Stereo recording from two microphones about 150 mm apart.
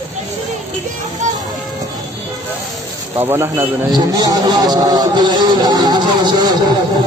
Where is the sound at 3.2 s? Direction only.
15° right (ahead or behind).